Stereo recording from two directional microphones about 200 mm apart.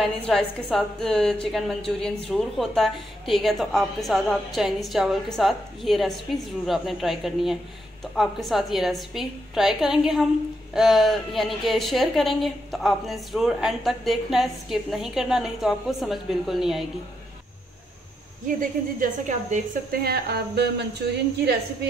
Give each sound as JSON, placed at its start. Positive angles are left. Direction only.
{"t": 0.3, "sound": "a woman's voice", "side_deg": 0}
{"t": 18.6, "sound": "a woman's voice", "side_deg": -40}
{"t": 20.0, "sound": "a woman's voice", "side_deg": -55}